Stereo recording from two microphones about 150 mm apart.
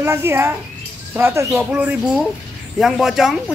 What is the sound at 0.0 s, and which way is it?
Speech, 15° right (ahead or behind).